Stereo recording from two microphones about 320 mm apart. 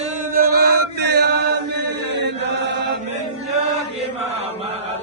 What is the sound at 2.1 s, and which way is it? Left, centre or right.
Chant, right.